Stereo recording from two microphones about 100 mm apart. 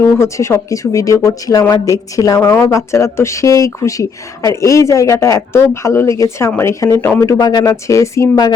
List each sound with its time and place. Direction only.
0.2 s speech: 30° left (ahead or behind)